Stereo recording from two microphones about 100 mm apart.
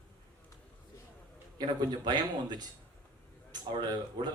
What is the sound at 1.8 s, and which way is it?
Speech, 45° right (ahead or behind).